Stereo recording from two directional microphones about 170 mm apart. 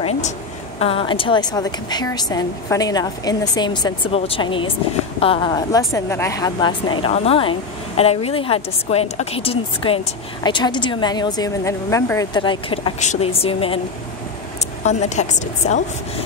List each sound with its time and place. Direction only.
0.7 s a woman's voice: 35° left (ahead or behind)
5.5 s a woman's voice: 20° left (ahead or behind)
14.9 s a woman's voice: 45° left (ahead or behind)